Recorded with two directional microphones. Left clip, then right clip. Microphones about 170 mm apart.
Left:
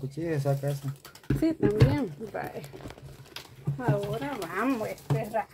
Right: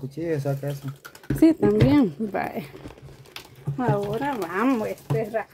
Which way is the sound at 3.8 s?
90° right.